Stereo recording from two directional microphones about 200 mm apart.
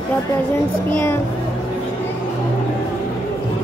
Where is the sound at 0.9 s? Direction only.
10° left (ahead or behind).